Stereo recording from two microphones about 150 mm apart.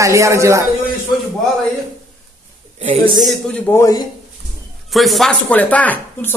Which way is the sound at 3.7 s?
20° left (ahead or behind).